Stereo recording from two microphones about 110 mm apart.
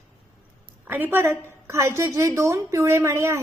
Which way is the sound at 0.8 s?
15° right (ahead or behind).